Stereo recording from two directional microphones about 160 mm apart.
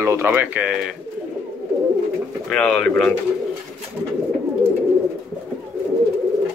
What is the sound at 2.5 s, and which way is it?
Speech, 5° left (ahead or behind).